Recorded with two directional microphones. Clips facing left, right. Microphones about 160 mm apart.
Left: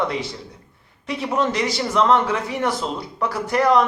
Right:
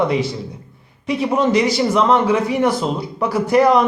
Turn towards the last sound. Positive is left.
turn(degrees=-10)  # may be behind; listen again after turning